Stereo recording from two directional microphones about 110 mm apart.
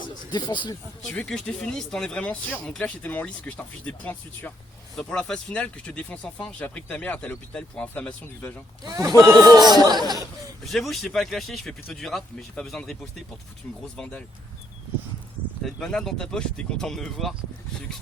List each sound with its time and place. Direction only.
0.0 s a sound: 45° left (ahead or behind)
1.0 s speech: 10° left (ahead or behind)
8.8 s speech: 40° right (ahead or behind)
10.7 s speech: centre (ahead or behind)
15.6 s speech: 5° left (ahead or behind)